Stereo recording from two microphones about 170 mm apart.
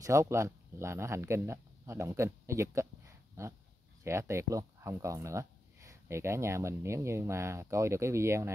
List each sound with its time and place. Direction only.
0.0 s speech: 15° right (ahead or behind)